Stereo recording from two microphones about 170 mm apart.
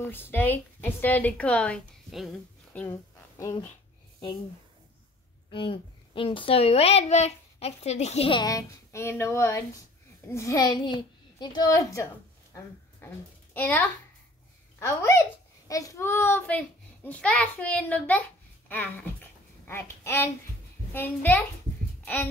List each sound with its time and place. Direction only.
0.0 s a child's voice: 10° left (ahead or behind)
5.5 s a woman's voice: 30° left (ahead or behind); by 19.0 s 10° left (ahead or behind)
19.6 s babbling: 15° left (ahead or behind)
20.9 s a child's voice: 10° left (ahead or behind)